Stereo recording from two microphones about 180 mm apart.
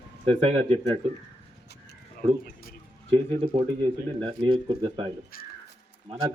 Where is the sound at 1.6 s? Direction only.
65° left (ahead or behind).